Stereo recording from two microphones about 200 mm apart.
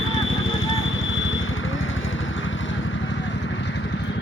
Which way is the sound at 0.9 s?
75° left (ahead or behind).